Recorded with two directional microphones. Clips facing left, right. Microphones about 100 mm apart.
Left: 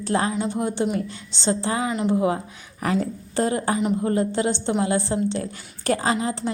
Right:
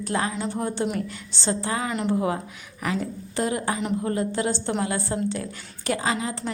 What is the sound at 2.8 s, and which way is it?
A woman's voice, 40° left (ahead or behind).